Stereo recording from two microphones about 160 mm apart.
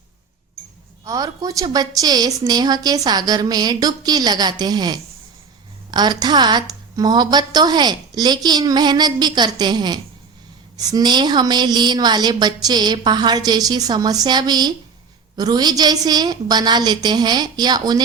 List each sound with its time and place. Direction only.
1.0 s a woman's voice: 20° right (ahead or behind)